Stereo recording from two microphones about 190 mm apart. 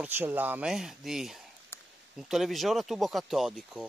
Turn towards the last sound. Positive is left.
turn(degrees=0)  # may be behind; listen again after turning